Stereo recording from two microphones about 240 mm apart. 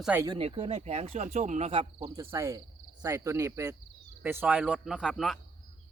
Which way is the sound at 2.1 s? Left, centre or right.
Centre.